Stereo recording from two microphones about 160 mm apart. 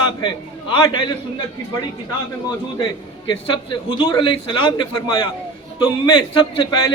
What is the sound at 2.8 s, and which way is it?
A man's voice, 30° left (ahead or behind).